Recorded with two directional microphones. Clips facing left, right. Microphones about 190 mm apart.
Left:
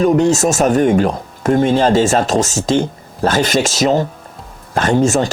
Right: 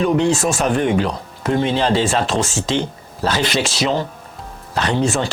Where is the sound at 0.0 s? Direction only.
45° left (ahead or behind).